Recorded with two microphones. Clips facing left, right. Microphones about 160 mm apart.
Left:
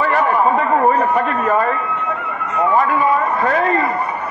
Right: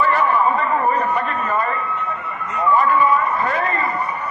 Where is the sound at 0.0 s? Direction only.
50° left (ahead or behind).